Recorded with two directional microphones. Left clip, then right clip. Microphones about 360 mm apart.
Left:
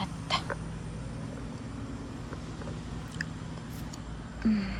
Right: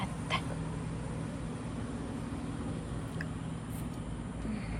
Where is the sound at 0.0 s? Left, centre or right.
Centre.